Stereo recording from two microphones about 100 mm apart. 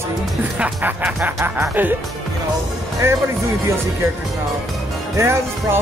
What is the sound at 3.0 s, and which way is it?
Speech, 25° right (ahead or behind).